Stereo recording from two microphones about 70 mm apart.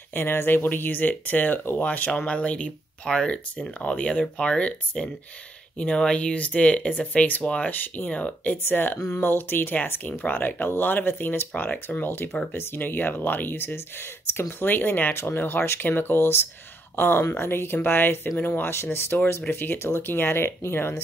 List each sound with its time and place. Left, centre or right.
0.1 s speech: left